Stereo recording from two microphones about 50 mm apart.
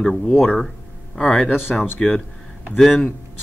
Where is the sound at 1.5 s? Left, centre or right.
Left.